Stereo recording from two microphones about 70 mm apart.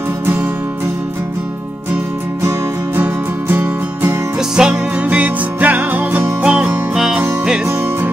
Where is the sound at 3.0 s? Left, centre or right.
Right.